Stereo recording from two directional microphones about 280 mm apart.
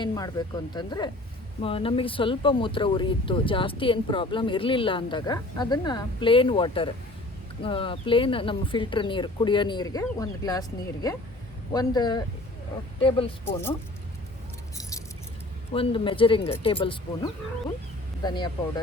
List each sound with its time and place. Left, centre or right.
0.0 s speech: centre
14.8 s keys jangling: centre
15.7 s speech: centre